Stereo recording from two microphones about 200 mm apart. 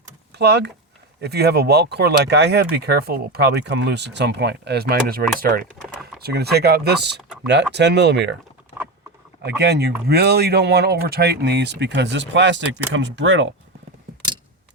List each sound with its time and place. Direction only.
0.3 s speech: 55° right (ahead or behind)
8.7 s patter: 25° left (ahead or behind)
9.4 s speech: 55° right (ahead or behind)